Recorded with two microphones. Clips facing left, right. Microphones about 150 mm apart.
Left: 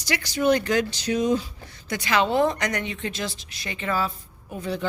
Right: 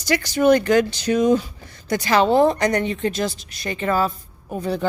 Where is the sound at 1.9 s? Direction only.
35° right (ahead or behind).